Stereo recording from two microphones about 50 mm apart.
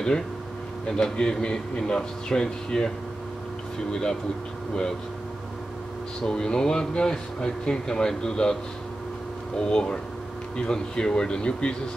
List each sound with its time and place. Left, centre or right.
0.8 s speech: centre
3.9 s speech: centre
6.2 s speech: centre
9.6 s speech: centre